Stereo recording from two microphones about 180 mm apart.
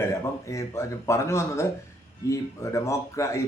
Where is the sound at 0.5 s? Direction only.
15° left (ahead or behind).